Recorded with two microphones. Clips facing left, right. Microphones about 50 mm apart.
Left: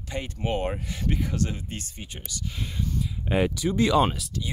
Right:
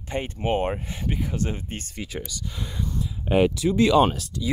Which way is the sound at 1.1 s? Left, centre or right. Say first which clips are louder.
Even; centre.